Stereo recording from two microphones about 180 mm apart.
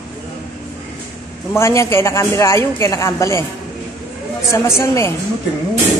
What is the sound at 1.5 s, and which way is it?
A woman's voice, 15° left (ahead or behind).